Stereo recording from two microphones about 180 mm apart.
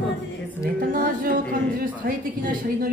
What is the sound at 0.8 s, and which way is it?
Speech, 50° right (ahead or behind).